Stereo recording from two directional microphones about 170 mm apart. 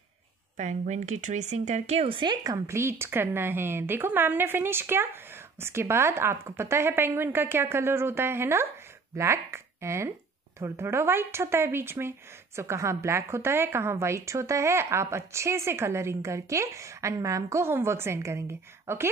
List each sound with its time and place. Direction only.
0.6 s a woman's voice: 45° right (ahead or behind); by 19.0 s 15° right (ahead or behind)